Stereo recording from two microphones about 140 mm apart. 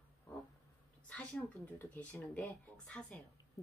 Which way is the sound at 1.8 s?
15° left (ahead or behind).